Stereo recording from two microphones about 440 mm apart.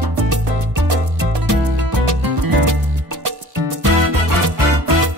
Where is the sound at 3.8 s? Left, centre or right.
Right.